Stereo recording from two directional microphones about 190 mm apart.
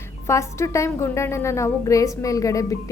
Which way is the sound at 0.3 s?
15° left (ahead or behind).